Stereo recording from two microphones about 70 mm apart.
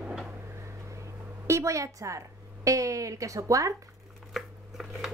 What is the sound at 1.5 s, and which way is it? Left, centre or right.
A woman's voice, right.